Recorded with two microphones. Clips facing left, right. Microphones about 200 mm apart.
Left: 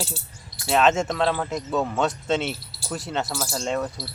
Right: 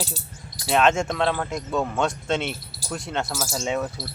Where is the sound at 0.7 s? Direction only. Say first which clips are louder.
Even; centre (ahead or behind).